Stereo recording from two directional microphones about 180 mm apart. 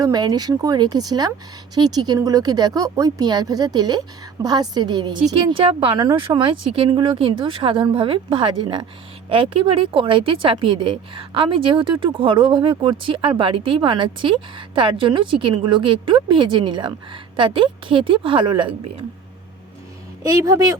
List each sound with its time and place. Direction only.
0.0 s a woman's voice: 20° right (ahead or behind)
20.2 s a woman's voice: 20° right (ahead or behind)